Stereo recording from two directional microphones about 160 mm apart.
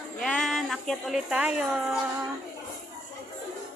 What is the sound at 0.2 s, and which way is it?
Music, centre (ahead or behind).